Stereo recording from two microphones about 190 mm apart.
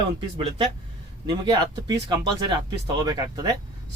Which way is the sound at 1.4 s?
20° right (ahead or behind).